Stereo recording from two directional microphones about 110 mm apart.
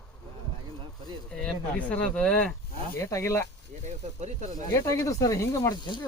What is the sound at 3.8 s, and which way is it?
Speech, 90° right.